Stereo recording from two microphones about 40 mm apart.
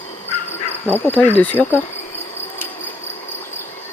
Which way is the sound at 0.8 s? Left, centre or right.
Left.